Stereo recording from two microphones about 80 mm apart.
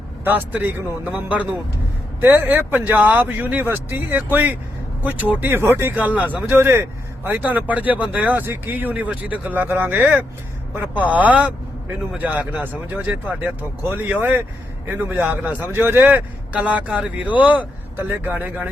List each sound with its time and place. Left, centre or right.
0.3 s speech: right
6.0 s speech: centre
6.6 s a man's voice: right